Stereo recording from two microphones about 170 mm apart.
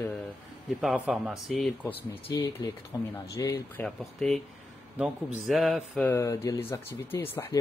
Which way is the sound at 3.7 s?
5° left (ahead or behind).